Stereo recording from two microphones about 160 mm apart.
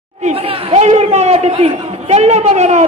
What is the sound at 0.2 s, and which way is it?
A man's voice, 40° right (ahead or behind).